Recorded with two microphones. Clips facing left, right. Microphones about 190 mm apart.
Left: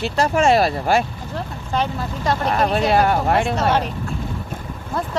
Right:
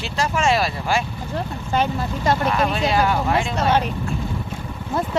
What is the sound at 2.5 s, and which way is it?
Speech, 45° left (ahead or behind).